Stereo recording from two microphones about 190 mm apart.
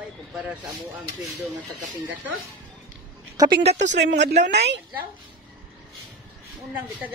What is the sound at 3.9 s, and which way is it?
Speech, 70° right (ahead or behind).